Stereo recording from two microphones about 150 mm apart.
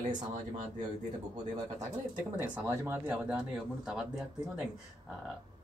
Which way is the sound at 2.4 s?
15° right (ahead or behind).